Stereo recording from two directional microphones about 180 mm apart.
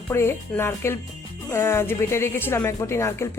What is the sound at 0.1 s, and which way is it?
Speech, 15° left (ahead or behind).